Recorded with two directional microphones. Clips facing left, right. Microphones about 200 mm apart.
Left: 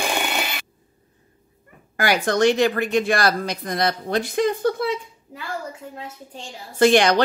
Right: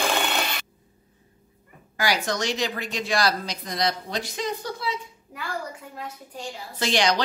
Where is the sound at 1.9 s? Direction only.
55° left (ahead or behind).